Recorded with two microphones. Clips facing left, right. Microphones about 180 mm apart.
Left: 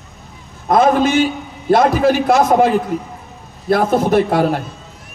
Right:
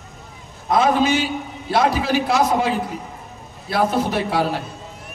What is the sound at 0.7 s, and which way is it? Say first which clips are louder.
A man's voice: left 4 dB; 50° left (ahead or behind).